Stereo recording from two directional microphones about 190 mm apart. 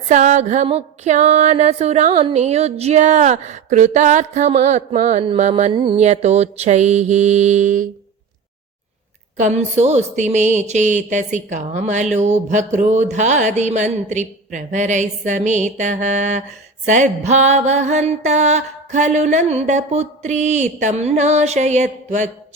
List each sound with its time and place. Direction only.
0.1 s music: 40° right (ahead or behind)
5.7 s music: 25° right (ahead or behind)
9.4 s music: 35° right (ahead or behind)